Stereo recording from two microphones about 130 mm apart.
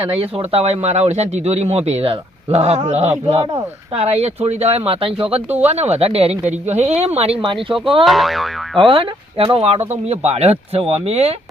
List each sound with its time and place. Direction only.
0.1 s speech: 45° right (ahead or behind)
8.0 s boing: centre (ahead or behind)
8.9 s speech: 40° right (ahead or behind)